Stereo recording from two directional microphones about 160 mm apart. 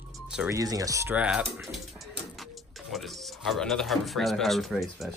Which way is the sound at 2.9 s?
Centre (ahead or behind).